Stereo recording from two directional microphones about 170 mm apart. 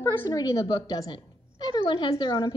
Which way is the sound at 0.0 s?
20° left (ahead or behind).